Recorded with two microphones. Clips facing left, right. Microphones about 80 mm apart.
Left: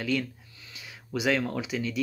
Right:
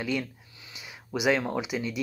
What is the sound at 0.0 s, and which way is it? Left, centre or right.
Speech, centre.